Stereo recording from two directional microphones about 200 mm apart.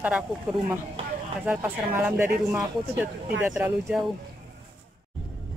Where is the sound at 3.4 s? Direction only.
5° right (ahead or behind).